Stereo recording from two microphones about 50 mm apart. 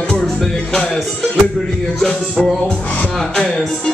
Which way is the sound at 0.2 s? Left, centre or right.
Centre.